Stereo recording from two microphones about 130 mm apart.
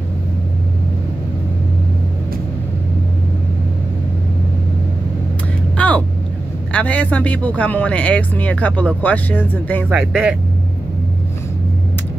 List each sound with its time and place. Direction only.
5.8 s vehicle: 10° left (ahead or behind)
6.7 s speech: 10° left (ahead or behind)
9.8 s speech: 5° right (ahead or behind)